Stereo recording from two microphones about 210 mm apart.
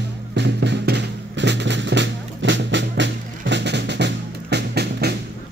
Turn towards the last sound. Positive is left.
turn(degrees=-50)  # may be behind; listen again after turning